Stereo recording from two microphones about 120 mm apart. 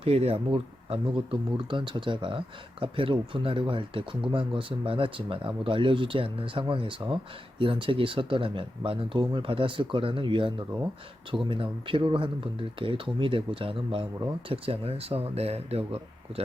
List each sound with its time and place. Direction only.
0.0 s speech: 55° right (ahead or behind)